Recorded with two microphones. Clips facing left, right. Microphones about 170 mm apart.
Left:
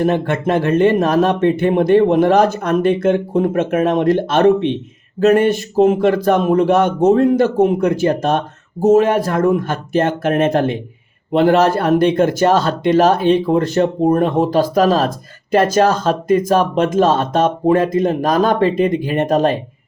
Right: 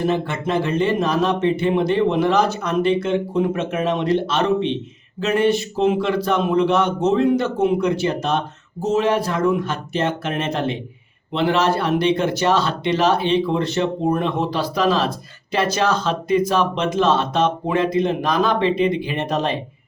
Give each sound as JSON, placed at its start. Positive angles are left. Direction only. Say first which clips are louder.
{"t": 0.0, "sound": "speech", "louder": "left 5 dB", "side_deg": 50}